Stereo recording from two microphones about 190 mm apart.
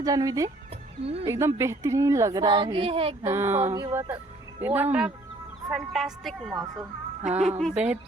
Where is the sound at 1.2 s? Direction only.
15° right (ahead or behind); by 3.1 s 30° right (ahead or behind).